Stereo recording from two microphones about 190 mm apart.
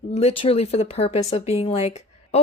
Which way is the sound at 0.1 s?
30° left (ahead or behind).